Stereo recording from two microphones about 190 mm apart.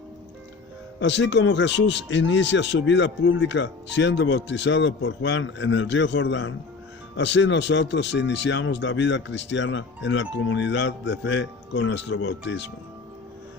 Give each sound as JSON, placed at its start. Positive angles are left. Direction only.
{"t": 0.9, "sound": "speech", "side_deg": 70}